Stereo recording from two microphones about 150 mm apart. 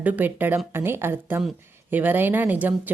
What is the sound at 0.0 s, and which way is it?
Speech, 10° right (ahead or behind).